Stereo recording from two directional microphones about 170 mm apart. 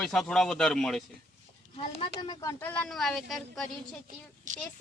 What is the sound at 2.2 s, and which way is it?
Speech, 25° left (ahead or behind).